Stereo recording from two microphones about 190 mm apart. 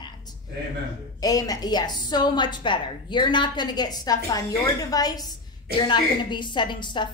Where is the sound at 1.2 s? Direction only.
20° left (ahead or behind).